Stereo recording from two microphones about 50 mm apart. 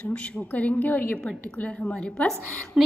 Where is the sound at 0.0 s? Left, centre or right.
Left.